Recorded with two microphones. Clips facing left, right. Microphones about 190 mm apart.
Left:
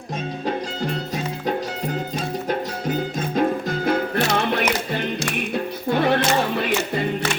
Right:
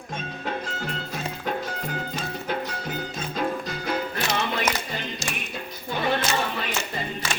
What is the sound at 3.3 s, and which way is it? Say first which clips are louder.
Music: left 7 dB; 50° left (ahead or behind).